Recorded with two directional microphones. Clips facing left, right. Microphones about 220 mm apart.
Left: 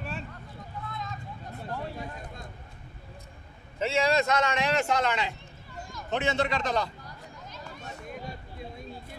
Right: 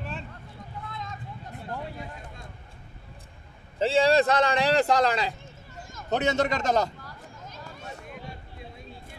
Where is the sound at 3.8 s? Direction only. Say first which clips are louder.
Right 5 dB; 30° right (ahead or behind).